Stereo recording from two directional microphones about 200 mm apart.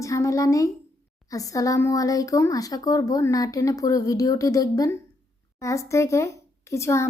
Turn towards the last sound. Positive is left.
turn(degrees=15)  # may be behind; listen again after turning